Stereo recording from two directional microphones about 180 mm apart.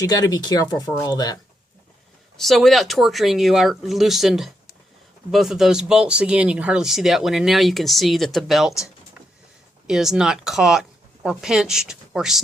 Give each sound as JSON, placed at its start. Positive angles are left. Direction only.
{"t": 0.0, "sound": "speech", "side_deg": 20}
{"t": 2.4, "sound": "speech", "side_deg": 0}
{"t": 9.8, "sound": "speech", "side_deg": 0}